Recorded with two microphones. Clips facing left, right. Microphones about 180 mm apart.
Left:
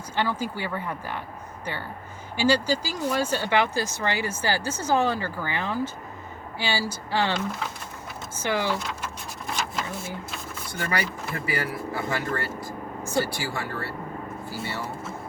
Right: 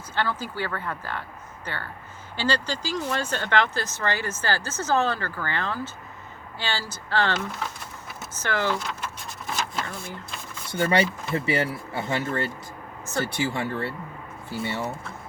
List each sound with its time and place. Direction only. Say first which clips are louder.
0.2 s speech: left 1 dB; 15° left (ahead or behind)
8.4 s speech: even; 10° left (ahead or behind)
9.6 s a sound: even; 10° left (ahead or behind)
10.7 s speech: right 7 dB; 25° right (ahead or behind)